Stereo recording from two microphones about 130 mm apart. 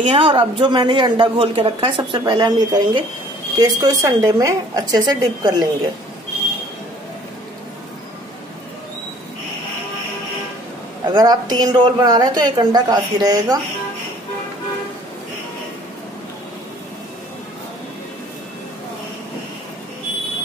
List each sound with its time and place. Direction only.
0.0 s a woman's voice: 40° right (ahead or behind)
11.1 s speech: 30° right (ahead or behind)